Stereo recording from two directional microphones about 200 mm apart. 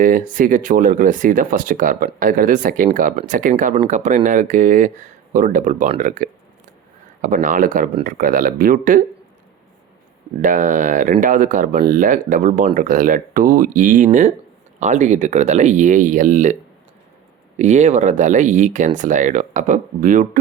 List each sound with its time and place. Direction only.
0.0 s speech: 40° right (ahead or behind)
10.4 s speech: 40° right (ahead or behind)
17.6 s speech: 35° right (ahead or behind)